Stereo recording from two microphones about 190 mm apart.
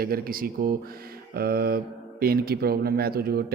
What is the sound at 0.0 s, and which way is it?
Speech, 50° right (ahead or behind).